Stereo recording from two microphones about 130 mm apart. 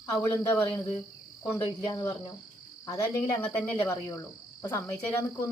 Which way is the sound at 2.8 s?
30° left (ahead or behind).